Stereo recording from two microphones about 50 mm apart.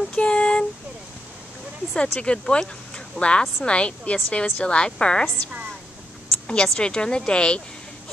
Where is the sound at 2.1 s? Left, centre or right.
Centre.